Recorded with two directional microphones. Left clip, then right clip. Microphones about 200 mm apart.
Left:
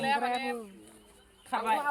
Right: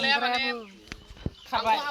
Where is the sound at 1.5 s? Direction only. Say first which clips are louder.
Right 5 dB; 15° right (ahead or behind).